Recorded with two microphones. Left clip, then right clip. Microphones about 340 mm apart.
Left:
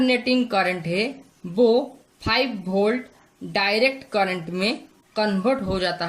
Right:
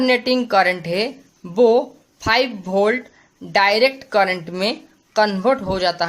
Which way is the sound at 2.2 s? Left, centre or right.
Centre.